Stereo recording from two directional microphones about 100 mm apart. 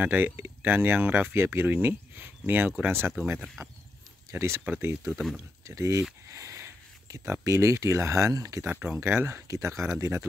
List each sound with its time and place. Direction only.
0.0 s speech: 20° right (ahead or behind)
3.3 s speech: centre (ahead or behind)
4.3 s speech: 25° right (ahead or behind)
5.1 s speech: 5° right (ahead or behind)
5.7 s speech: 30° right (ahead or behind)
6.2 s a sound: 30° right (ahead or behind)
7.4 s speech: 30° right (ahead or behind)
8.6 s speech: 15° right (ahead or behind)